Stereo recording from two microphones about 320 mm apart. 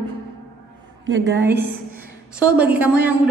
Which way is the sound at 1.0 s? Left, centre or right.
Right.